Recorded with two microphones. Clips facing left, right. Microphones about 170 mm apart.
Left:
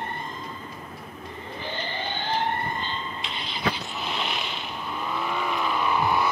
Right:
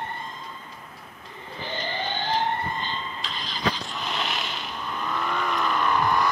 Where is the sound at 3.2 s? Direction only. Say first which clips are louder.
Even; 65° left (ahead or behind).